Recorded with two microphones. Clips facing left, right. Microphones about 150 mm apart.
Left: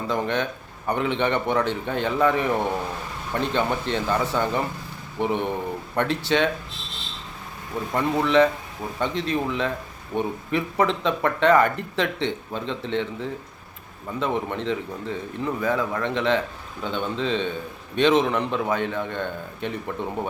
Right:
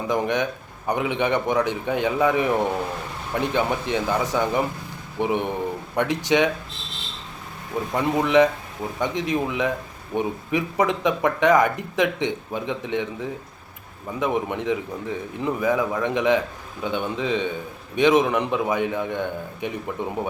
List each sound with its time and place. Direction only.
0.1 s speech: 15° right (ahead or behind)
7.9 s speech: 15° right (ahead or behind)